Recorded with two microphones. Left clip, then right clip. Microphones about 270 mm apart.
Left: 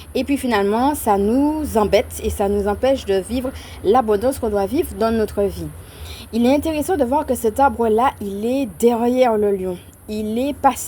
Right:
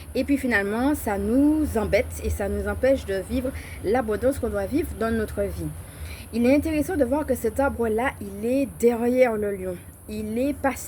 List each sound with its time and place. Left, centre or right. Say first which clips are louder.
0.1 s speech: left 4 dB; left